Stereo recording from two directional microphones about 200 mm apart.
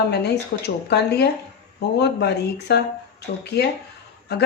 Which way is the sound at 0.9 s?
55° left (ahead or behind).